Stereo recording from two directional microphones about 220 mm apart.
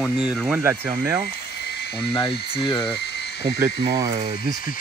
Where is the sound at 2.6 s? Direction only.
20° left (ahead or behind).